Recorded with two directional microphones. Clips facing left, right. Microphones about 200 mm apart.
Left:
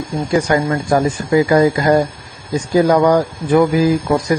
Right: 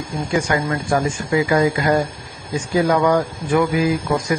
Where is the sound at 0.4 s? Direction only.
35° left (ahead or behind).